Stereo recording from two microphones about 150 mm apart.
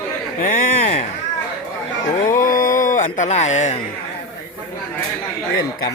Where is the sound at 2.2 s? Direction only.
65° left (ahead or behind).